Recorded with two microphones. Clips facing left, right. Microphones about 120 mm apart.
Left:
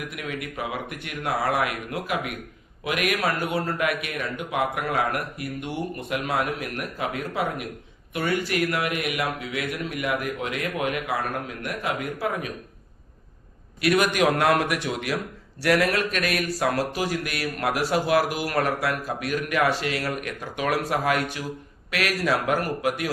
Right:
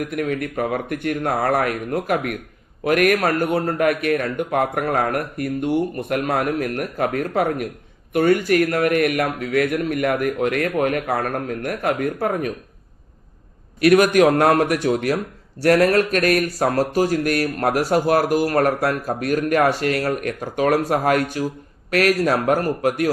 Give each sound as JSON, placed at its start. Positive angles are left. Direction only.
{"t": 0.0, "sound": "speech", "side_deg": -45}
{"t": 13.8, "sound": "a man's voice", "side_deg": -45}